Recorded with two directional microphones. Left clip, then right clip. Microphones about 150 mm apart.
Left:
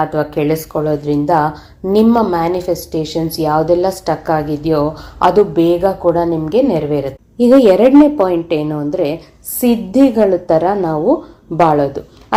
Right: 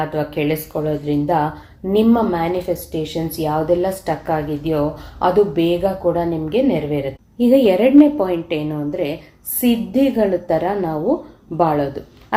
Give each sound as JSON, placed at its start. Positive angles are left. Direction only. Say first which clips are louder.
{"t": 0.0, "sound": "a woman's voice", "louder": "left 5 dB", "side_deg": 40}